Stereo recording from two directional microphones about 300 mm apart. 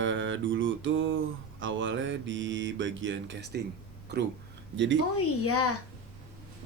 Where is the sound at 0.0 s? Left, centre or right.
Right.